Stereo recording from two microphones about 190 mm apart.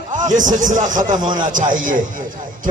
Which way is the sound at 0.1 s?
40° right (ahead or behind).